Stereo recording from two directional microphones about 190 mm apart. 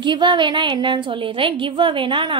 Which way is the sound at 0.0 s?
25° right (ahead or behind).